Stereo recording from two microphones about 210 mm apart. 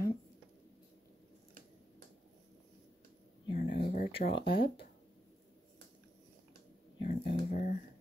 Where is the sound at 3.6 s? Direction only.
45° left (ahead or behind).